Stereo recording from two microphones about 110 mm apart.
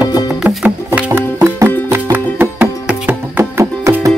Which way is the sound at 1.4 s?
25° right (ahead or behind).